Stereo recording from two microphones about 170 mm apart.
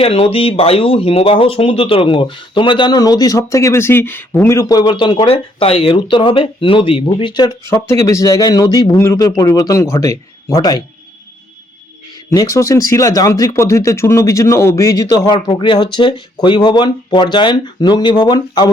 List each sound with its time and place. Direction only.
0.0 s speech: 35° left (ahead or behind)
12.3 s speech: 20° left (ahead or behind)